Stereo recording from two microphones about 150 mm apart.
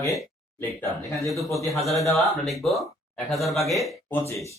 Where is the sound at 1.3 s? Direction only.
Centre (ahead or behind).